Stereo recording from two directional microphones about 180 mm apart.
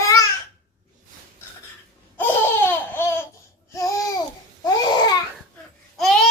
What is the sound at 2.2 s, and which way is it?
Laughter, 10° left (ahead or behind).